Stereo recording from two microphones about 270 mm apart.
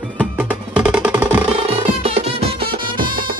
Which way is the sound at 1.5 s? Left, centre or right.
Right.